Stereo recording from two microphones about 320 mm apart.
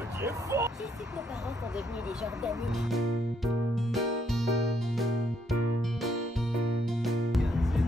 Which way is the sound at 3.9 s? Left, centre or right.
Centre.